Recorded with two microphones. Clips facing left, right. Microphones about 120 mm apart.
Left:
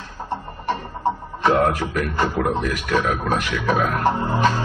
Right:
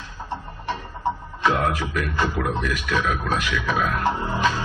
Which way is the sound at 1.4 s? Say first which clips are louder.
Left 4 dB; 40° left (ahead or behind).